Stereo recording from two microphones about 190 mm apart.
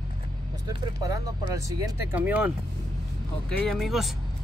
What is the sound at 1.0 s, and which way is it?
Speech, 20° right (ahead or behind).